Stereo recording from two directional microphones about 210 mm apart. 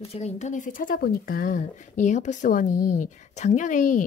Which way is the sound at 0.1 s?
30° left (ahead or behind).